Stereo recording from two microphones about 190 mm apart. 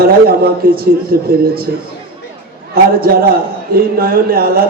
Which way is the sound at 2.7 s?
50° right (ahead or behind).